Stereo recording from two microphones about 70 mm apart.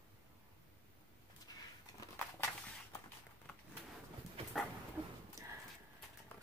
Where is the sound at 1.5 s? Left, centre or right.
Left.